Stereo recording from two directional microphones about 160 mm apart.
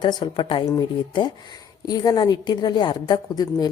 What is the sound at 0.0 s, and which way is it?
Speech, 30° left (ahead or behind).